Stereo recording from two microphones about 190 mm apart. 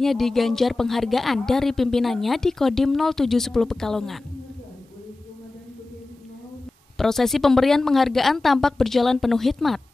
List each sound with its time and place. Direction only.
0.0 s a woman's voice: centre (ahead or behind)
7.0 s a woman's voice: centre (ahead or behind)